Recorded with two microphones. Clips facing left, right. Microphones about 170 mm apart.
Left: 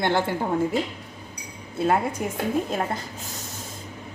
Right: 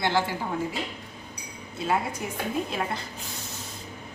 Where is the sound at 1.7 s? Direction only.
55° left (ahead or behind).